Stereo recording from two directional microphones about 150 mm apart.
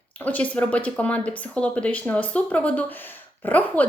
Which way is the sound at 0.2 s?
10° left (ahead or behind).